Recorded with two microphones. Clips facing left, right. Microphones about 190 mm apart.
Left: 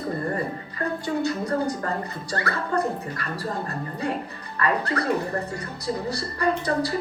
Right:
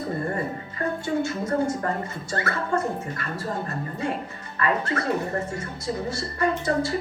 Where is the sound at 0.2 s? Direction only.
25° right (ahead or behind).